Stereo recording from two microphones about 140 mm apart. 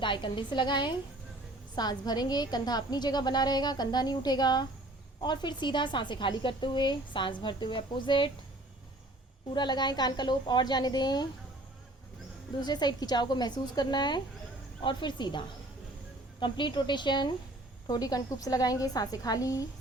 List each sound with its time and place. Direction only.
0.0 s a woman's voice: 35° left (ahead or behind)
9.6 s a woman's voice: 30° left (ahead or behind)
12.5 s a woman's voice: 30° left (ahead or behind)